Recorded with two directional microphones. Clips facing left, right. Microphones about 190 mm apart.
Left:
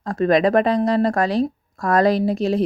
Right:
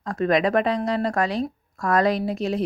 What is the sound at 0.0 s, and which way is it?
A woman's voice, 30° left (ahead or behind).